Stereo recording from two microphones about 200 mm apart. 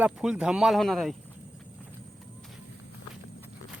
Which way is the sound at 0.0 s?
5° right (ahead or behind).